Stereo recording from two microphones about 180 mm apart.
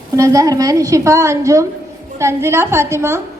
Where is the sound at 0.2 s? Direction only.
20° right (ahead or behind).